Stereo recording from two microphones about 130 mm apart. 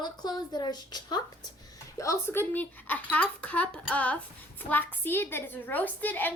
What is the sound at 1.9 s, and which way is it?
A child's voice, 20° left (ahead or behind).